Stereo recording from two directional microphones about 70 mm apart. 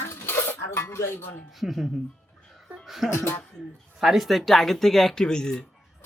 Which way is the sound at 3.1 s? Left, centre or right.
Left.